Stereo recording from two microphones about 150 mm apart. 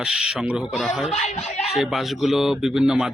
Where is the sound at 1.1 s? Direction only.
50° left (ahead or behind).